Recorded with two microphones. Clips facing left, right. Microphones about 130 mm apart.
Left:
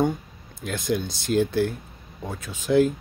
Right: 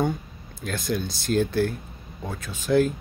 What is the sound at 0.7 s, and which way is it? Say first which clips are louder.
Speech: left 2 dB; 15° left (ahead or behind).